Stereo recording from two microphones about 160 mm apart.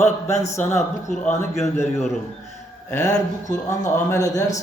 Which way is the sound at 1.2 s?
15° left (ahead or behind).